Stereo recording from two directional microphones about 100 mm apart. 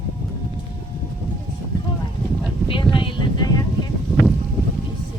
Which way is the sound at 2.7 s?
55° left (ahead or behind).